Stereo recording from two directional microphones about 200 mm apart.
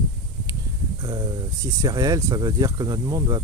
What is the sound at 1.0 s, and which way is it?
Speech, 20° right (ahead or behind).